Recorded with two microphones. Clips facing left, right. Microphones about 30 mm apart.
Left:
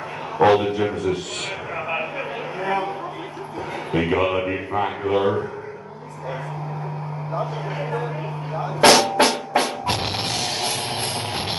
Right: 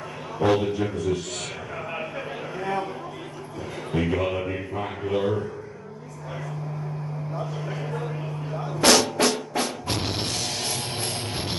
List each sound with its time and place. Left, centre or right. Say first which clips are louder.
0.5 s a man's voice: left 2 dB; left
1.9 s a sound: left 6 dB; left
3.9 s a man's voice: left 5 dB; left
7.3 s a man's voice: left 7 dB; left
9.1 s music: left 5 dB; left